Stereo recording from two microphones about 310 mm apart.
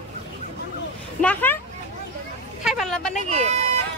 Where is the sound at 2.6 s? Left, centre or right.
Centre.